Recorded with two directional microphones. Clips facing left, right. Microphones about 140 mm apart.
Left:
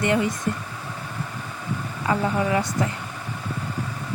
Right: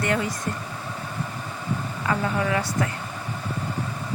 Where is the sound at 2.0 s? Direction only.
20° left (ahead or behind).